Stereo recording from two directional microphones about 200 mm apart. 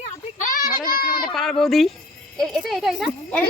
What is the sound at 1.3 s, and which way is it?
Speech, centre (ahead or behind).